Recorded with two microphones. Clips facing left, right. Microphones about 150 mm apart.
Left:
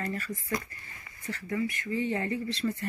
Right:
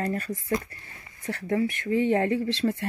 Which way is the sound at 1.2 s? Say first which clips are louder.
Right 7 dB; 65° right (ahead or behind).